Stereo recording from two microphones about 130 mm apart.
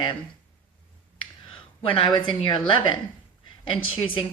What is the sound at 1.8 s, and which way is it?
A woman's voice, 45° left (ahead or behind).